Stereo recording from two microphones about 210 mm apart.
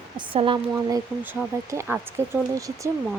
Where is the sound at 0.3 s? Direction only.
25° right (ahead or behind).